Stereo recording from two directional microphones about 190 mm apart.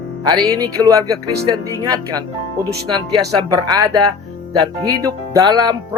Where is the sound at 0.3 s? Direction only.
20° right (ahead or behind).